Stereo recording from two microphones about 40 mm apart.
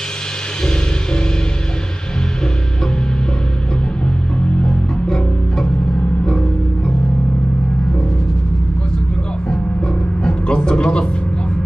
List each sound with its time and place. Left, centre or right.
4.5 s music: left
10.2 s music: left